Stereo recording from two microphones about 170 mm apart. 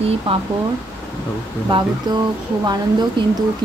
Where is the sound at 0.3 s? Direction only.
30° right (ahead or behind).